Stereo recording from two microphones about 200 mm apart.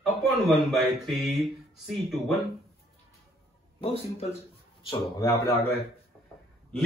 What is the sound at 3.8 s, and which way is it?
Speech, 30° left (ahead or behind).